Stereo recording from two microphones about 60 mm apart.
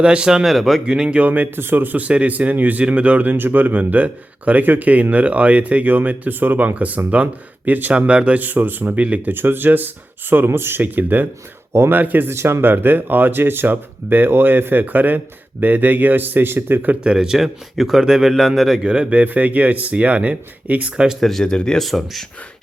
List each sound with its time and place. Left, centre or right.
0.0 s speech: centre
0.4 s a man's voice: centre
0.9 s speech: centre
1.2 s speech: right
9.3 s speech: right
11.7 s speech: right
11.9 s speech: right
12.3 s speech: right
17.0 s a man's voice: centre
18.9 s speech: centre
21.2 s speech: centre
21.8 s a man's voice: centre